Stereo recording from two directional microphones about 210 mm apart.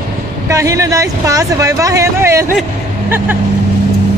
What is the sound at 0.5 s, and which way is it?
A man's voice, 15° right (ahead or behind).